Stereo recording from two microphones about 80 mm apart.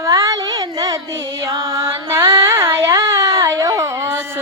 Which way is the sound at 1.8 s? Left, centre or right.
Right.